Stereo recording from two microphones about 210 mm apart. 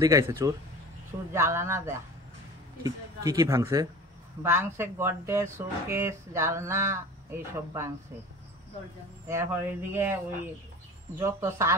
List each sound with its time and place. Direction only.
0.0 s speech: 15° right (ahead or behind)
9.3 s speech: 10° right (ahead or behind)
11.1 s speech: 15° right (ahead or behind)